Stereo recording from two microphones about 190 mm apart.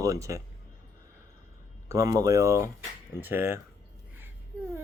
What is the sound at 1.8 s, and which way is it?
Speech, 20° right (ahead or behind).